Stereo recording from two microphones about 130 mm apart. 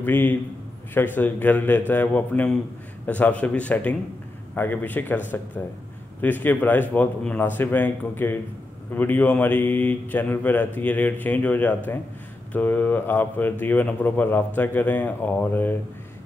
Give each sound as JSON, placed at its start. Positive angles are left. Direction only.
{"t": 0.0, "sound": "speech", "side_deg": 15}